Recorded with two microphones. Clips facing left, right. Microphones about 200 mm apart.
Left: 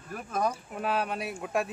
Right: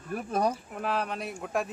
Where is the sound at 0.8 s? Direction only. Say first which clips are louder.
Left 1 dB; centre (ahead or behind).